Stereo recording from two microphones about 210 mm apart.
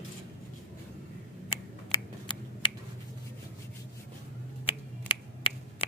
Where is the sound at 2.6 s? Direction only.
25° left (ahead or behind).